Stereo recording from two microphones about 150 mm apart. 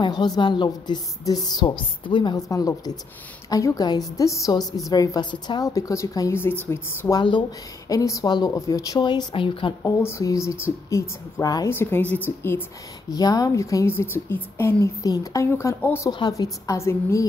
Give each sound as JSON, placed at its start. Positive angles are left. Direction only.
{"t": 0.0, "sound": "a woman's voice", "side_deg": 30}
{"t": 7.2, "sound": "a woman's voice", "side_deg": 30}
{"t": 10.0, "sound": "a woman's voice", "side_deg": 20}
{"t": 13.1, "sound": "a woman's voice", "side_deg": 25}
{"t": 16.1, "sound": "a woman's voice", "side_deg": 25}